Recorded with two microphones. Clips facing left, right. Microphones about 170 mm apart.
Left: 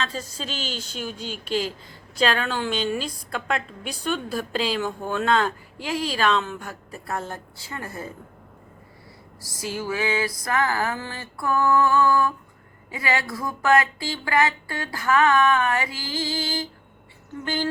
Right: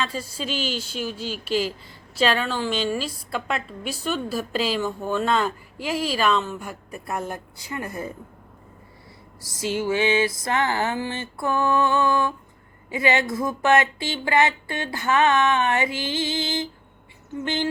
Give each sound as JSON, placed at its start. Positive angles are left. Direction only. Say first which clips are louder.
{"t": 0.0, "sound": "a woman's voice", "louder": "right 2 dB", "side_deg": -10}
{"t": 9.4, "sound": "speech", "louder": "right 5 dB", "side_deg": -25}